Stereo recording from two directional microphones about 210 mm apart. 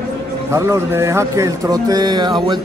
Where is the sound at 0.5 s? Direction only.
15° right (ahead or behind).